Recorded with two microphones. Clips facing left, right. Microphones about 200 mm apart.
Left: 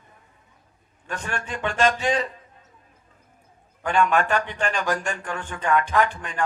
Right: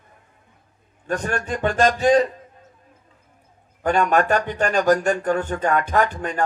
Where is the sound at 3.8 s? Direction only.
40° right (ahead or behind).